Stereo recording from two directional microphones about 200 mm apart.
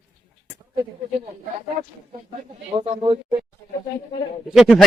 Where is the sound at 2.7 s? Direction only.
25° right (ahead or behind).